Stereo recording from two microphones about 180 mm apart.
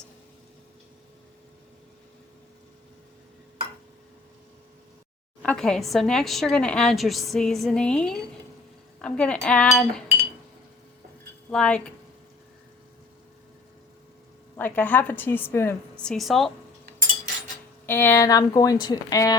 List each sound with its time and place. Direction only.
5.4 s a woman's voice: 5° left (ahead or behind)
11.5 s a woman's voice: 5° left (ahead or behind)
14.5 s a woman's voice: 10° left (ahead or behind)
17.8 s a woman's voice: 10° left (ahead or behind)